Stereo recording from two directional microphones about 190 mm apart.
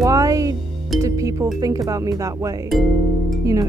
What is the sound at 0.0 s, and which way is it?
Music, 15° right (ahead or behind).